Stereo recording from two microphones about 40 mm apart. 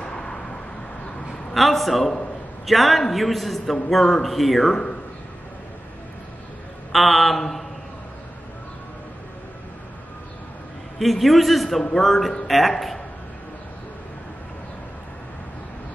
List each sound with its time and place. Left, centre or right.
0.0 s vehicle: centre
1.5 s a man's voice: centre
6.9 s a man's voice: centre
11.0 s a man's voice: centre